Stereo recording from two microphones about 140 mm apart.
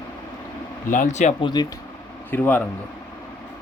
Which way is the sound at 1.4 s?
30° left (ahead or behind).